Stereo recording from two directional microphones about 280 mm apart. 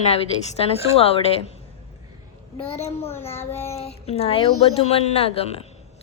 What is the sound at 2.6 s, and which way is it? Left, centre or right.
Speech, left.